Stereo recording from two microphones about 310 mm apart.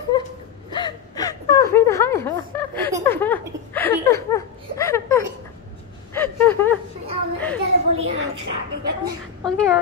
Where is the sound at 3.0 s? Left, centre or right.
Centre.